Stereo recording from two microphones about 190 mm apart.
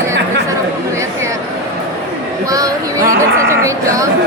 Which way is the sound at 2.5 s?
15° right (ahead or behind).